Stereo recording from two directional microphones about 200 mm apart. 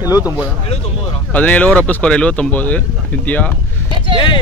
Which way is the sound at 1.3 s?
5° left (ahead or behind).